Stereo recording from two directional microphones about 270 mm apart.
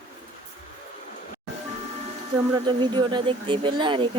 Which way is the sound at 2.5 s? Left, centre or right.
Centre.